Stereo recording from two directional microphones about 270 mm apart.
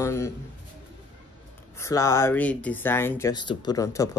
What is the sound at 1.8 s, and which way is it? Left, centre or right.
Speech, centre.